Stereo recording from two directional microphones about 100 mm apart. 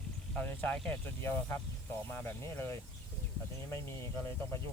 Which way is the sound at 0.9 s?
25° left (ahead or behind).